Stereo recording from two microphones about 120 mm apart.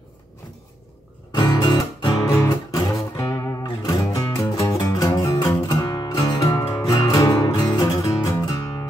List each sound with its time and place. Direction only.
1.3 s music: 35° left (ahead or behind)
2.2 s music: 25° left (ahead or behind)